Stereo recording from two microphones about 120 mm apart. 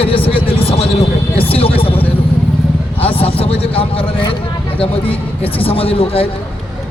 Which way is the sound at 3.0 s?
50° left (ahead or behind).